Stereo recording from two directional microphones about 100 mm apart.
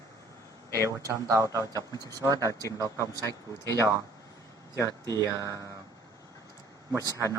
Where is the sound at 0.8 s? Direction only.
35° right (ahead or behind).